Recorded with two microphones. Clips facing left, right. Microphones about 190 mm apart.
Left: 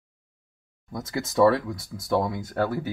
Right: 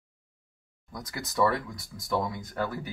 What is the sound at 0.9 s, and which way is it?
Speech, 25° left (ahead or behind).